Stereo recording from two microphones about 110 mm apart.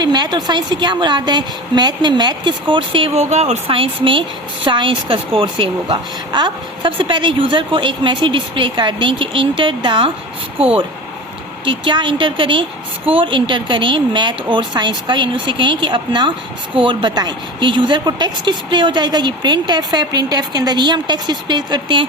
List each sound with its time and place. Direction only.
0.0 s speech: 40° right (ahead or behind)
3.2 s speech: 80° right
3.8 s speech: 50° right (ahead or behind)
10.6 s speech: 60° right (ahead or behind)
11.6 s speech: 45° right (ahead or behind)